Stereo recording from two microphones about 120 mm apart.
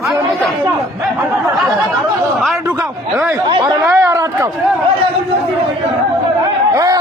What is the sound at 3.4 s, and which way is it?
Speech, 40° right (ahead or behind).